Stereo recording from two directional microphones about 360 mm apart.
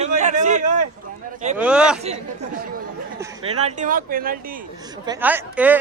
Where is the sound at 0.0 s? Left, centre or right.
Centre.